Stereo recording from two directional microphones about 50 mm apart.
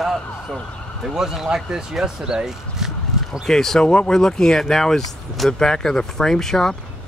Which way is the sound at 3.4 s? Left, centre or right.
Centre.